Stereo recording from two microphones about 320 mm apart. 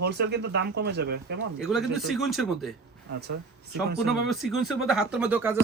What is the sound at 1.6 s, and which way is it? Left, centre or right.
Speech, centre.